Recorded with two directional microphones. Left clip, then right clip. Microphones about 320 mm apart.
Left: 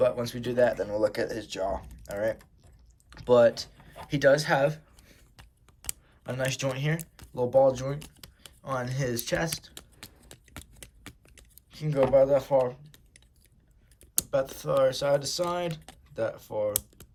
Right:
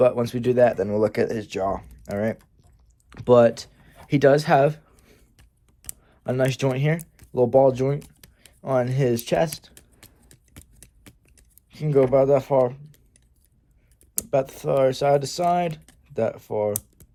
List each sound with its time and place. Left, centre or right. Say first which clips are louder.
0.0 s speech: right 7 dB; centre
10.0 s a sound: left 4 dB; centre
11.7 s speech: right 4 dB; centre
14.3 s speech: right 6 dB; centre